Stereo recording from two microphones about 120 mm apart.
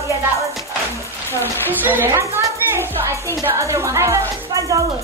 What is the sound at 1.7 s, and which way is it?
A woman's voice, 15° right (ahead or behind).